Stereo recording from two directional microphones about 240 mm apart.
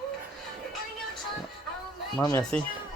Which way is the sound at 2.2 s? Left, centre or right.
Centre.